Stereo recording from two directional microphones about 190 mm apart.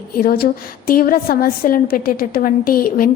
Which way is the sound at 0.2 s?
55° left (ahead or behind).